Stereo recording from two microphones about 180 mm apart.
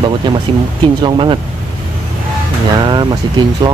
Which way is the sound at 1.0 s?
25° right (ahead or behind).